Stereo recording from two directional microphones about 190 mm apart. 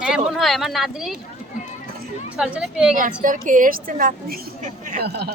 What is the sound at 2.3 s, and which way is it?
Speech, 5° right (ahead or behind).